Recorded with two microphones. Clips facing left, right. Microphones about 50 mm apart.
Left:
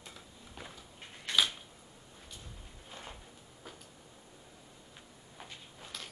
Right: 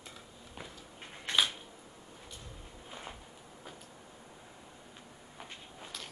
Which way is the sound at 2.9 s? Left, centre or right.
Centre.